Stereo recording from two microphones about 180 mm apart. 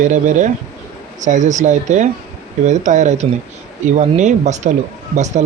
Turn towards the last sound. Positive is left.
turn(degrees=-40)  # may be behind; listen again after turning